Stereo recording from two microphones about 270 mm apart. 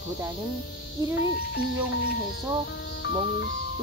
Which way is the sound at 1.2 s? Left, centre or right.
Left.